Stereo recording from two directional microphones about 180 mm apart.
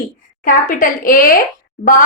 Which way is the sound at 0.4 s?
50° left (ahead or behind).